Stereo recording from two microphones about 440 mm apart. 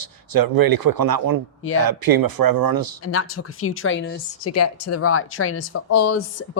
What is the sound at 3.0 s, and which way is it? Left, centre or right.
A woman's voice, left.